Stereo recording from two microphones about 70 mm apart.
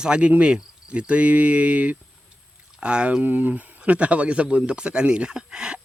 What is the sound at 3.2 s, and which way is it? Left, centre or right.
Speech, right.